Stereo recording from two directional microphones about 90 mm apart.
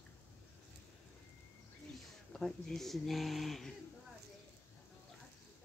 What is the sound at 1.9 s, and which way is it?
Speech, 5° left (ahead or behind).